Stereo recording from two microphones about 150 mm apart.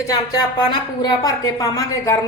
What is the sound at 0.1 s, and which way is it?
A woman's voice, 30° left (ahead or behind).